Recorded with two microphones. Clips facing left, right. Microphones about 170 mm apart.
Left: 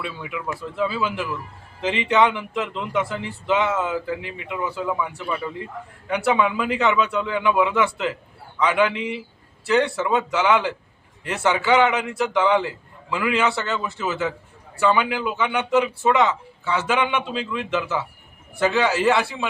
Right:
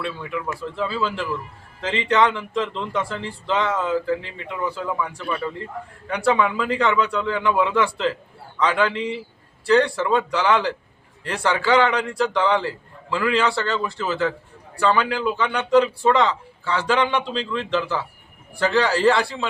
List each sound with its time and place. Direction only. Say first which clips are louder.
0.0 s a man's voice: right 2 dB; 10° left (ahead or behind)
8.6 s a man's voice: left 1 dB; 15° left (ahead or behind)
16.0 s a man's voice: even; 5° left (ahead or behind)